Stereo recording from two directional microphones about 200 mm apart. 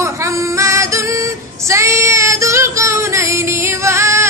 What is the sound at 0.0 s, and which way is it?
Female singing, 15° right (ahead or behind).